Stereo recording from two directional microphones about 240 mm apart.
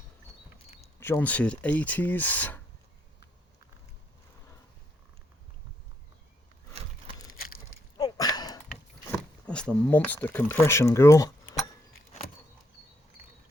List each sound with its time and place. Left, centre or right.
0.9 s speech: centre
7.9 s a sound: centre
9.1 s speech: centre